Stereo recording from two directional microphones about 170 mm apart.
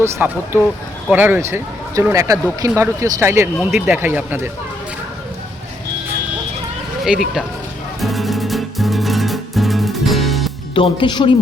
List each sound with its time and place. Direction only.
0.0 s speech: 15° right (ahead or behind)
7.0 s speech: centre (ahead or behind)
8.0 s music: centre (ahead or behind)
10.8 s speech: 30° left (ahead or behind)